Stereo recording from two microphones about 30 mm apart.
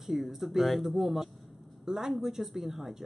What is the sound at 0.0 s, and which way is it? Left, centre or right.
Speech, centre.